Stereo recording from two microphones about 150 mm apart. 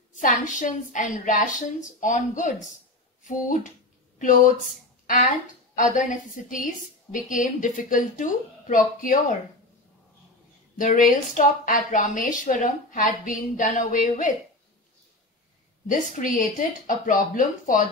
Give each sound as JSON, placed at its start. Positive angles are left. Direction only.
{"t": 0.1, "sound": "a woman's voice", "side_deg": 55}
{"t": 10.8, "sound": "a woman's voice", "side_deg": 60}
{"t": 15.9, "sound": "a woman's voice", "side_deg": 60}